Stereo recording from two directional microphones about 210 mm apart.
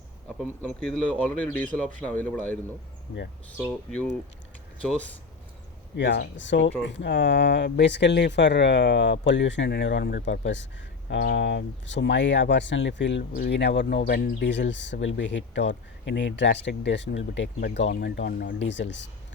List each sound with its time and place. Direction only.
0.4 s speech: 5° left (ahead or behind)
3.6 s speech: centre (ahead or behind)
6.0 s speech: 60° left (ahead or behind)